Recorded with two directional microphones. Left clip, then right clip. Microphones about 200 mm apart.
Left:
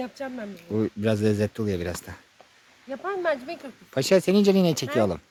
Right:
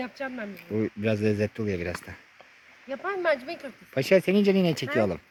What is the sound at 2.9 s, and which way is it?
Speech, 20° right (ahead or behind).